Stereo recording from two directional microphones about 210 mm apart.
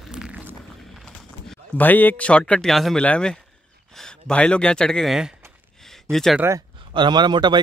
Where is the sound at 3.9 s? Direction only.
5° left (ahead or behind).